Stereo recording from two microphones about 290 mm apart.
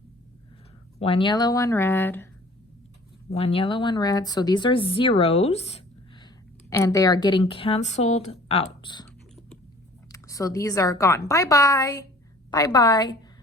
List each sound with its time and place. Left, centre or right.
0.9 s speech: centre
3.3 s speech: centre
6.7 s speech: centre
10.1 s speech: centre